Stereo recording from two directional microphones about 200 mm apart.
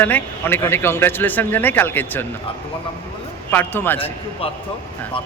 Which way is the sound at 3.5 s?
10° left (ahead or behind).